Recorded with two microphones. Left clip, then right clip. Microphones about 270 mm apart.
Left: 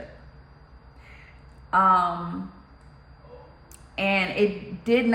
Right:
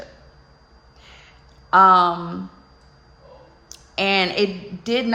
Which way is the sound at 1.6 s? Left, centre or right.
Centre.